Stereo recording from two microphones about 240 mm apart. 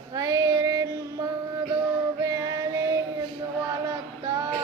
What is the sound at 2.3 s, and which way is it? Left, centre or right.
Music, centre.